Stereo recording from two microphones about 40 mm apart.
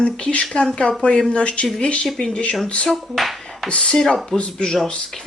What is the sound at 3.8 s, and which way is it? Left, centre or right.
Speech, centre.